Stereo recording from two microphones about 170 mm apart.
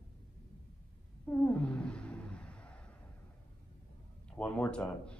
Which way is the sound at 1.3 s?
10° left (ahead or behind).